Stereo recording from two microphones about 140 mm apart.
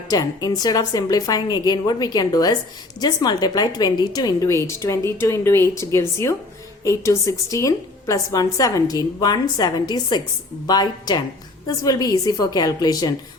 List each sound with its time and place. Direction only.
0.1 s a woman's voice: 25° left (ahead or behind)